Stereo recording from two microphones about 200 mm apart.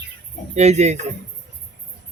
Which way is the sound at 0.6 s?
35° right (ahead or behind).